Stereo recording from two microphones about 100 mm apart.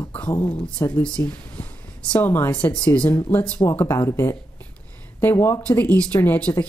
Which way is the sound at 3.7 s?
30° left (ahead or behind).